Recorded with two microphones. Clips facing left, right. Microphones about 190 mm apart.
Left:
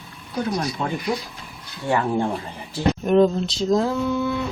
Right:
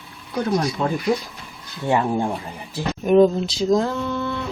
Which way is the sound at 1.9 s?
20° right (ahead or behind).